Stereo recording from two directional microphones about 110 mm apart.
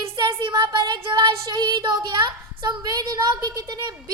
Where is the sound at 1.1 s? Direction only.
45° right (ahead or behind).